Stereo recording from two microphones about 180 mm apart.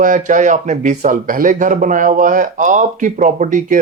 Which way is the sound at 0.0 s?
45° right (ahead or behind).